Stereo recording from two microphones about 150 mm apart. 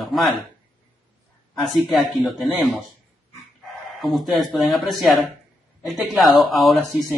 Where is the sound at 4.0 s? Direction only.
Centre (ahead or behind).